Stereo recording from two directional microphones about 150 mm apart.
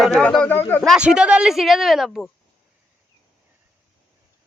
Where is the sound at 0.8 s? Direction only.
5° right (ahead or behind).